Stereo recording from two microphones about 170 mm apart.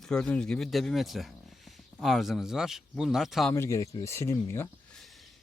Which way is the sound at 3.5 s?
15° left (ahead or behind).